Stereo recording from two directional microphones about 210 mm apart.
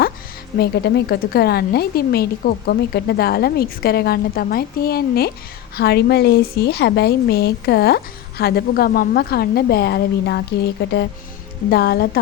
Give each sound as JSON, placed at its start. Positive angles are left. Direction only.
{"t": 0.6, "sound": "a woman's voice", "side_deg": 50}